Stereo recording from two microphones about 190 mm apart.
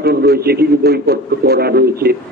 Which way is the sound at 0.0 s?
55° right (ahead or behind).